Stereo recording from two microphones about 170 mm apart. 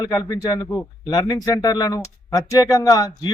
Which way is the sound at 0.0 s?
20° left (ahead or behind).